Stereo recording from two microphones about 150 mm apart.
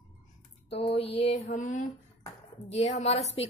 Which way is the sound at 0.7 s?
40° left (ahead or behind).